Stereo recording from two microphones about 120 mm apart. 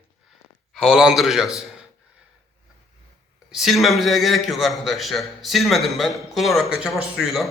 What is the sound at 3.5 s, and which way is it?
A man's voice, centre (ahead or behind).